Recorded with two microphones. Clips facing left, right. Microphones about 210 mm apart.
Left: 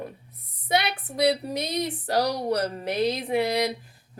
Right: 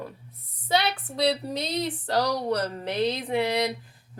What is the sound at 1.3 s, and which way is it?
Speech, 20° left (ahead or behind).